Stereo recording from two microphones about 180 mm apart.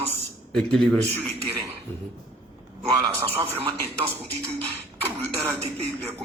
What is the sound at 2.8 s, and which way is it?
Speech, 15° right (ahead or behind).